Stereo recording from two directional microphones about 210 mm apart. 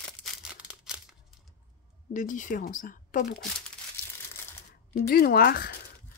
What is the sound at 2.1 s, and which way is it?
Speech, 35° left (ahead or behind).